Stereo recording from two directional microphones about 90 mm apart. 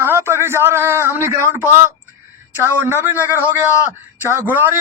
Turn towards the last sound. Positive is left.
turn(degrees=-20)  # may be behind; listen again after turning